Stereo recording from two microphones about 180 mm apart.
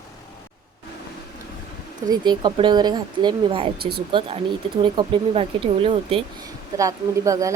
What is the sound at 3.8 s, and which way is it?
Speech, 60° right (ahead or behind).